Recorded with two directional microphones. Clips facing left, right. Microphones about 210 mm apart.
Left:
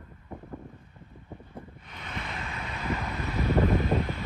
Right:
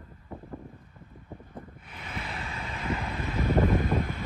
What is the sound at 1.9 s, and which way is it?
Vehicle, centre (ahead or behind).